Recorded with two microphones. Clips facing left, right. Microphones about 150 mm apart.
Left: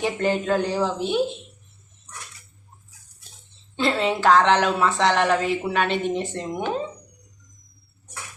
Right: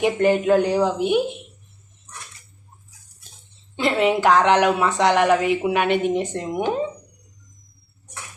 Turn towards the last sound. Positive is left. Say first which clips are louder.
# right 3 dB
turn(degrees=-15)  # may be behind; listen again after turning